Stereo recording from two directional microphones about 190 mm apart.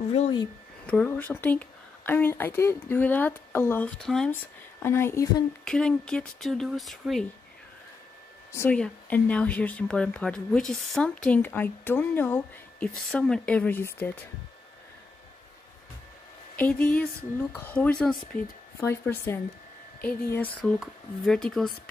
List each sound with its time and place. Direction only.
0.1 s a woman's voice: 30° left (ahead or behind)
0.8 s a woman's voice: 5° left (ahead or behind)
4.8 s a woman's voice: 15° left (ahead or behind)
8.5 s a woman's voice: 10° left (ahead or behind)
16.5 s a woman's voice: 5° left (ahead or behind)